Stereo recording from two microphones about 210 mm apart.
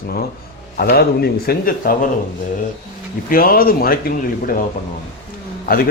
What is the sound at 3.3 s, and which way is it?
Speech, 45° left (ahead or behind).